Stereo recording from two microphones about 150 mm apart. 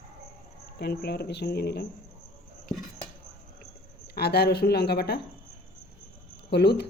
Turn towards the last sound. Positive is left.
turn(degrees=90)